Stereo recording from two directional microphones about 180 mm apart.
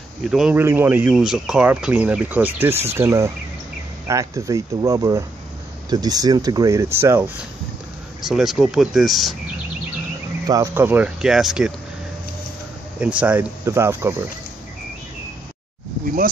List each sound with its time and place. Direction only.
0.2 s speech: 5° right (ahead or behind)
8.3 s speech: centre (ahead or behind)
10.4 s speech: 20° right (ahead or behind); by 11.7 s 5° right (ahead or behind)
13.0 s speech: 5° right (ahead or behind)